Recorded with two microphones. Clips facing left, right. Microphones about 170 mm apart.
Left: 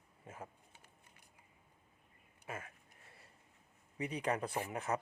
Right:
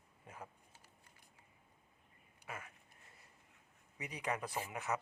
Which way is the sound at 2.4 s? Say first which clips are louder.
Left 3 dB; 25° left (ahead or behind).